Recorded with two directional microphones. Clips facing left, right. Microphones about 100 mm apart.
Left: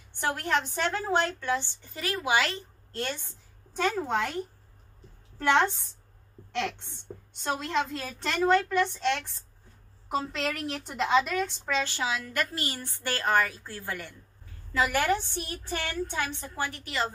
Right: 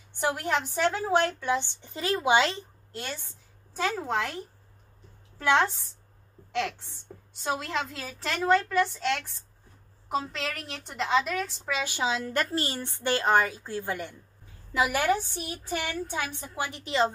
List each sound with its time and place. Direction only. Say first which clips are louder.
0.2 s a woman's voice: right 1 dB; 15° right (ahead or behind)
2.9 s a woman's voice: left 4 dB; 5° right (ahead or behind)
11.8 s a woman's voice: right 2 dB; 15° right (ahead or behind)
12.1 s a woman's voice: right 3 dB; 30° right (ahead or behind)